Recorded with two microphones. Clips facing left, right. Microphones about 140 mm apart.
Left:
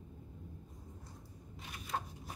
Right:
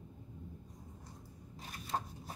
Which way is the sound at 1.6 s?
35° right (ahead or behind).